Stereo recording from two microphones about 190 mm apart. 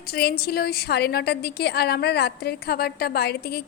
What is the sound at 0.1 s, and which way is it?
A woman's voice, 55° left (ahead or behind).